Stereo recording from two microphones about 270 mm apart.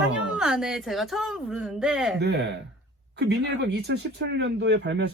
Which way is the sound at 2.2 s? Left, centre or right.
Right.